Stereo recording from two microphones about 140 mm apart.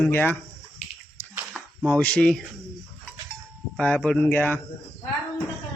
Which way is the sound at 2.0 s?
10° left (ahead or behind).